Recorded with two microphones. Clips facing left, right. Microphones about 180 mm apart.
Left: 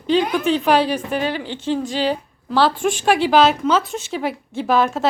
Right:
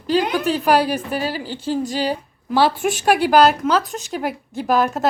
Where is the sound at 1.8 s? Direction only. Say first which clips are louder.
Even; 40° right (ahead or behind).